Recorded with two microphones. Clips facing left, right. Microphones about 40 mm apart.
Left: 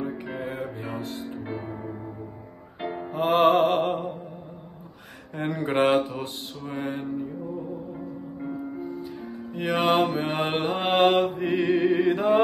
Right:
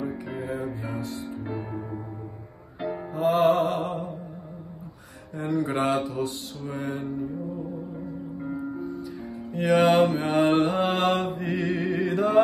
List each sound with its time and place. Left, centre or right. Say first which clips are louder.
0.0 s music: even; left
3.1 s music: left 1 dB; left
5.3 s mantra: even; left
8.8 s music: even; left
9.5 s music: right 5 dB; centre
10.0 s mantra: right 4 dB; left